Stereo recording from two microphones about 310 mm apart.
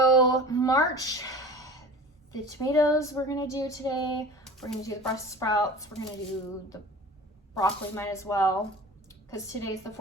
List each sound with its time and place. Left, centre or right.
0.2 s a sound: centre
2.3 s speech: centre
7.5 s speech: centre